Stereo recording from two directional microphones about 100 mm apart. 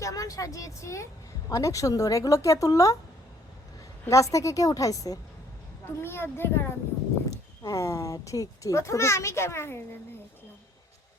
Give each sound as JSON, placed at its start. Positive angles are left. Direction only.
{"t": 0.0, "sound": "a child's voice", "side_deg": 35}
{"t": 4.1, "sound": "a child's voice", "side_deg": 35}
{"t": 5.8, "sound": "speech", "side_deg": 25}
{"t": 7.3, "sound": "a child's voice", "side_deg": 35}